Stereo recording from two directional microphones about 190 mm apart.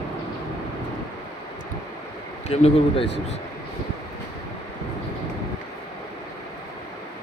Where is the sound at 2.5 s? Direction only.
35° left (ahead or behind).